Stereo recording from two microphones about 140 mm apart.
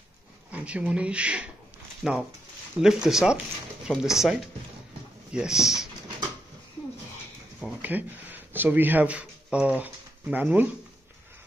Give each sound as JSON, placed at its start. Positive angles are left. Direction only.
{"t": 0.5, "sound": "speech", "side_deg": -10}
{"t": 7.8, "sound": "speech", "side_deg": -15}